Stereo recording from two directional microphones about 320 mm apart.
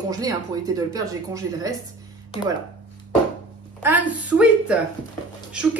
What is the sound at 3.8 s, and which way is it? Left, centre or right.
A woman's voice, centre.